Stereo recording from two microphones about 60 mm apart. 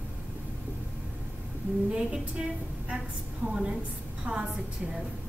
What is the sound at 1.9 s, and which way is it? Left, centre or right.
A woman's voice, centre.